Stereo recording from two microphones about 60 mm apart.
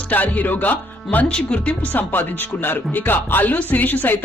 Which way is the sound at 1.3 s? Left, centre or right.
Centre.